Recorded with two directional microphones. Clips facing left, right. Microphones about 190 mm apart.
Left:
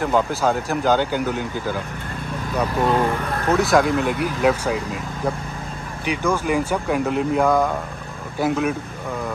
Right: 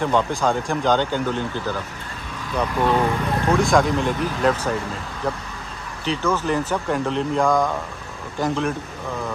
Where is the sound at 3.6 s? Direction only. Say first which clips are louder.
Left 2 dB; 5° left (ahead or behind).